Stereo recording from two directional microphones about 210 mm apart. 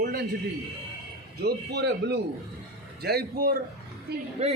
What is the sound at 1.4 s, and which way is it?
A man's voice, 50° right (ahead or behind).